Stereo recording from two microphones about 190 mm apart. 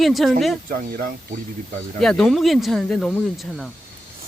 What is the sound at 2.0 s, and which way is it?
Speech, centre (ahead or behind).